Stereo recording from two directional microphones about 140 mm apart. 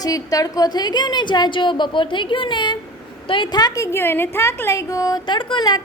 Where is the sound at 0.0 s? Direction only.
25° left (ahead or behind).